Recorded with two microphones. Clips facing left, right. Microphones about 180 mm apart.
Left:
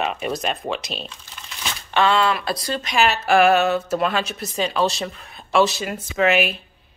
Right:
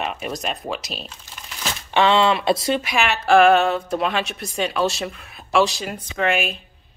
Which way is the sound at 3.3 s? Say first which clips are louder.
Right 3 dB; 5° left (ahead or behind).